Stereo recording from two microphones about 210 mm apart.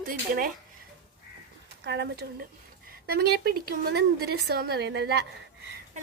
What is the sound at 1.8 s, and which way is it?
A woman's voice, 55° right (ahead or behind).